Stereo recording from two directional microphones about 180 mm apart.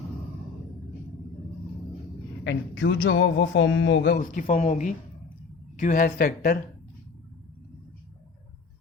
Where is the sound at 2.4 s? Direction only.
90° left.